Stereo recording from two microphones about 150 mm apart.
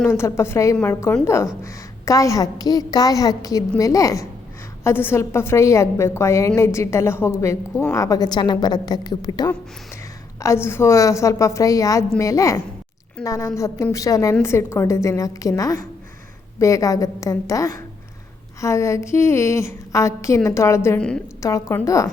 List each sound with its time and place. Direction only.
0.0 s a woman's voice: 15° left (ahead or behind)